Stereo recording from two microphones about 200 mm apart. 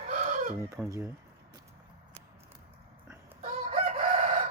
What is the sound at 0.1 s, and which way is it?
Chicken, 40° right (ahead or behind).